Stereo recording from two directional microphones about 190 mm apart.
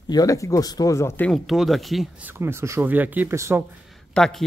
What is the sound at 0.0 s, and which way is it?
Speech, 20° left (ahead or behind).